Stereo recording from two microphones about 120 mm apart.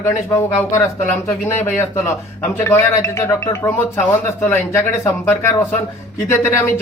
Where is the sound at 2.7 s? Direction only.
20° left (ahead or behind).